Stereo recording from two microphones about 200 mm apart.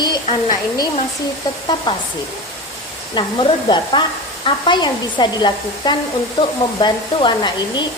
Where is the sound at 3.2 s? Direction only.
25° left (ahead or behind).